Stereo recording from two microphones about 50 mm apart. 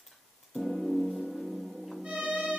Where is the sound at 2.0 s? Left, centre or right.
Right.